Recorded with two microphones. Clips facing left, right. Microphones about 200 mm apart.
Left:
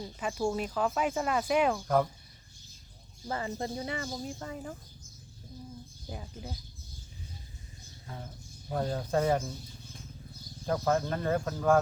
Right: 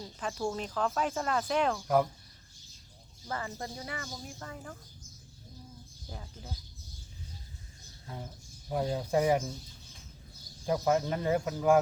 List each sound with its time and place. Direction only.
0.0 s speech: 10° left (ahead or behind)
3.2 s speech: 25° left (ahead or behind)
6.1 s speech: 15° left (ahead or behind)
8.0 s speech: 10° right (ahead or behind)
10.7 s speech: 15° right (ahead or behind)